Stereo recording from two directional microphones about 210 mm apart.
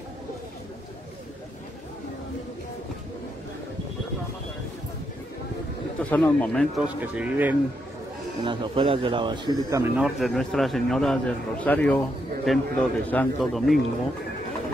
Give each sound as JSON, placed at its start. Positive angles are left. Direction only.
{"t": 6.0, "sound": "a man's voice", "side_deg": 5}
{"t": 7.0, "sound": "speech", "side_deg": -10}
{"t": 8.5, "sound": "speech", "side_deg": -25}
{"t": 10.0, "sound": "a man's voice", "side_deg": 0}